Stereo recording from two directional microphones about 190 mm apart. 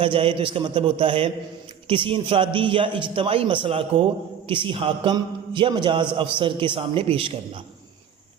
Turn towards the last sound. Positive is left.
turn(degrees=-30)  # may be behind; listen again after turning